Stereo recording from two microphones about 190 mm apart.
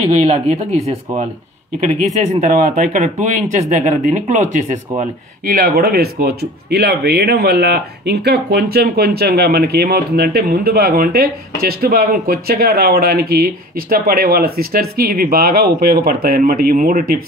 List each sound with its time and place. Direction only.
0.1 s speech: 35° right (ahead or behind)
2.4 s speech: 45° right (ahead or behind)